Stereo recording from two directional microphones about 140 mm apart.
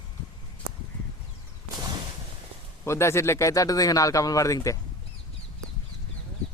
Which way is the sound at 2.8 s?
20° left (ahead or behind).